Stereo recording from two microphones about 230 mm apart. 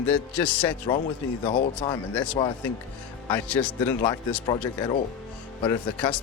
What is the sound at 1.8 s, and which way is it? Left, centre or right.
Speech, centre.